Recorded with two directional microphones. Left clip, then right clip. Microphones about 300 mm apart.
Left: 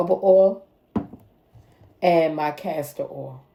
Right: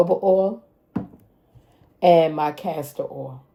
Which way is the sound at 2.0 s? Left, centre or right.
Right.